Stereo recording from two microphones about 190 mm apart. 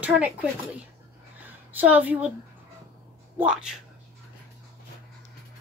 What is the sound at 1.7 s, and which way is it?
Speech, 10° right (ahead or behind).